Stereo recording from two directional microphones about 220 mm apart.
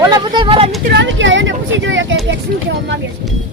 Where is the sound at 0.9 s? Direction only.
55° right (ahead or behind).